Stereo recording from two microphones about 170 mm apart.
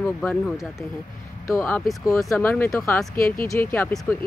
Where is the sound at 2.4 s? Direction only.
15° left (ahead or behind).